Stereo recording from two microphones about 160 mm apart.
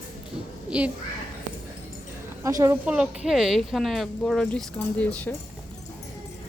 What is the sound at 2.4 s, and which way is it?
Speech, 20° right (ahead or behind).